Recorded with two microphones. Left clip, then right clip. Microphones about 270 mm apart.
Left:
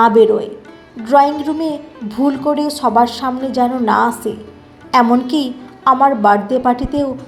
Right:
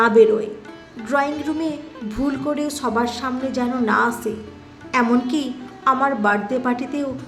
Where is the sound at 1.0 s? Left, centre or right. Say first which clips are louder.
Left 10 dB; centre.